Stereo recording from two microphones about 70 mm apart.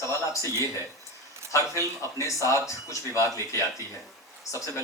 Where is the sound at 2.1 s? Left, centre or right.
Left.